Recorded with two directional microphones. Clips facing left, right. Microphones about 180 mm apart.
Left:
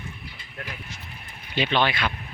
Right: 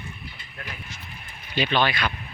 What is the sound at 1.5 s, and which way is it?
Speech, 20° left (ahead or behind).